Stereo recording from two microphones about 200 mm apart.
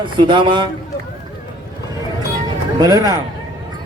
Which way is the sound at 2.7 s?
20° right (ahead or behind).